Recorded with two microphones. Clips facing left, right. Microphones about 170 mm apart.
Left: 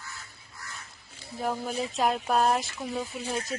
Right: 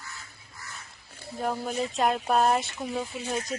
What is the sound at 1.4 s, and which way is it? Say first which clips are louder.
Speech: right 1 dB; 5° right (ahead or behind).